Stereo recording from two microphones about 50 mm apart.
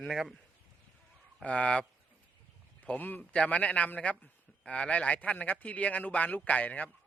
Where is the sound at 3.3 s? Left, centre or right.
Left.